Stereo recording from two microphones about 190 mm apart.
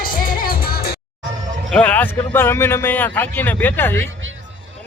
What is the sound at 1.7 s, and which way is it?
A man's voice, 5° left (ahead or behind).